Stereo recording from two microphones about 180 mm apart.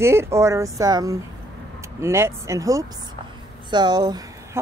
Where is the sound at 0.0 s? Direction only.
15° right (ahead or behind).